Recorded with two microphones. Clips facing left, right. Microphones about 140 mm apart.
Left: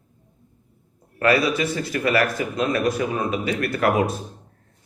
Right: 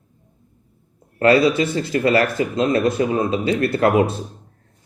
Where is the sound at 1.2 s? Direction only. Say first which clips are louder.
Right 5 dB; 25° right (ahead or behind).